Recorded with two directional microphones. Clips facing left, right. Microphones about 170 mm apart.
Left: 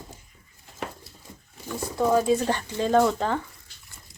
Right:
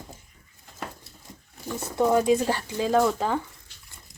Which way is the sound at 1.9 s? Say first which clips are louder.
Right 1 dB; 20° right (ahead or behind).